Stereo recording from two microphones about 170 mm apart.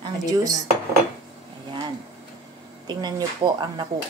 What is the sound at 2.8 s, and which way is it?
A woman's voice, 25° right (ahead or behind).